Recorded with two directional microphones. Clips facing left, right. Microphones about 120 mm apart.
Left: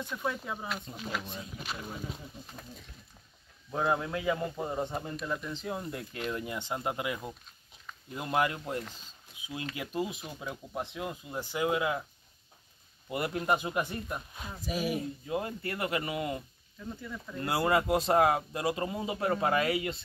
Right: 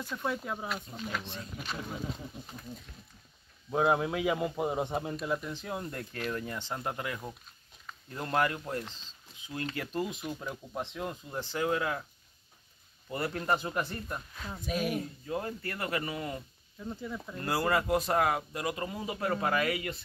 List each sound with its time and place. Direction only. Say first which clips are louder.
0.2 s speech: right 2 dB; centre (ahead or behind)
3.7 s a man's voice: right 3 dB; 15° right (ahead or behind); by 6.0 s 5° left (ahead or behind)
6.1 s speech: even; 15° left (ahead or behind)
13.1 s speech: left 1 dB; 15° left (ahead or behind)
14.6 s speech: even; 5° left (ahead or behind)
15.2 s speech: left 1 dB; 20° left (ahead or behind)
16.8 s speech: right 2 dB; 20° right (ahead or behind)
17.4 s speech: left 2 dB; 20° left (ahead or behind)